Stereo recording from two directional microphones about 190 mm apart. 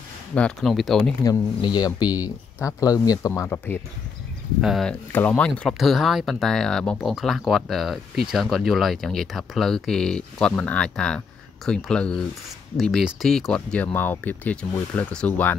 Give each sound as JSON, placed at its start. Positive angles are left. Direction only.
{"t": 0.3, "sound": "speech", "side_deg": 5}
{"t": 1.2, "sound": "speech", "side_deg": 20}
{"t": 4.6, "sound": "speech", "side_deg": 0}